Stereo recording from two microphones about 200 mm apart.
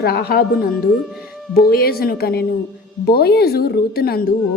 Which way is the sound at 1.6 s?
50° left (ahead or behind).